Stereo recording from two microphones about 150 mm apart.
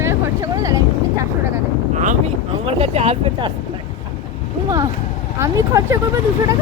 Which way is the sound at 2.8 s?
45° right (ahead or behind).